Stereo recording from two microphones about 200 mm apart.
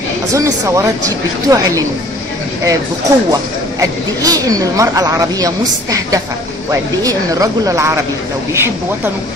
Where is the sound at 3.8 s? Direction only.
15° right (ahead or behind).